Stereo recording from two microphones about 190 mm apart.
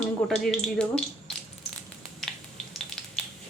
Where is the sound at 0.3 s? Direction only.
Centre (ahead or behind).